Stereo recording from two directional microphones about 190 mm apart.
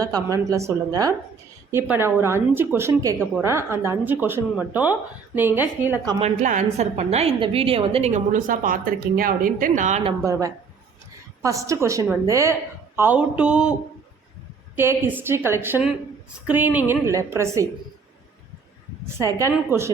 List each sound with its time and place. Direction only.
0.0 s a woman's voice: 20° right (ahead or behind)
6.1 s a woman's voice: 35° right (ahead or behind)
11.4 s speech: 15° right (ahead or behind)
13.0 s a sound: 10° right (ahead or behind)
14.8 s speech: 10° right (ahead or behind)
19.0 s speech: 15° right (ahead or behind)